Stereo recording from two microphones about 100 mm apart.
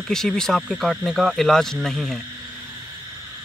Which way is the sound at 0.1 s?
5° left (ahead or behind).